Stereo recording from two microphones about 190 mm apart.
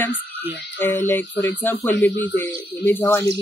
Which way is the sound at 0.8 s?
10° left (ahead or behind).